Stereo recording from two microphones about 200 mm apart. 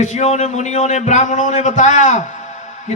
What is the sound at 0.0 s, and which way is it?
A man's voice, 35° left (ahead or behind).